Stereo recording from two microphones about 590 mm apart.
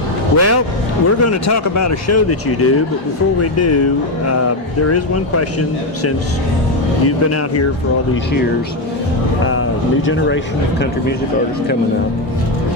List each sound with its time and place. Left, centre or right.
0.3 s speech: left
9.4 s a sound: left
10.1 s speech: centre